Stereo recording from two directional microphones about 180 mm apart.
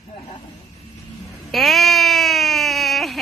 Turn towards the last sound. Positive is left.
turn(degrees=0)  # may be behind; listen again after turning